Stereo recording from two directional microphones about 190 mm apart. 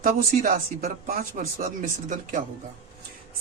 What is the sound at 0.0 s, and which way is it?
Speech, 50° right (ahead or behind).